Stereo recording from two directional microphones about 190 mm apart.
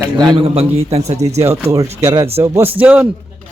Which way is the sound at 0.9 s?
35° right (ahead or behind).